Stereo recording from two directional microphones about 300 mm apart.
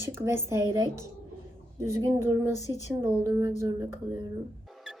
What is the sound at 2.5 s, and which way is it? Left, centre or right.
Speech, centre.